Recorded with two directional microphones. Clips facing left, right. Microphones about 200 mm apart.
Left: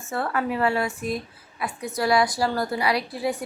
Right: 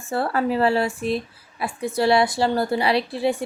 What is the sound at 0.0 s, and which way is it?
Speech, 30° right (ahead or behind).